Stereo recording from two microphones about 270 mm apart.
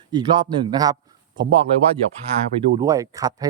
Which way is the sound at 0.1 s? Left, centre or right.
Centre.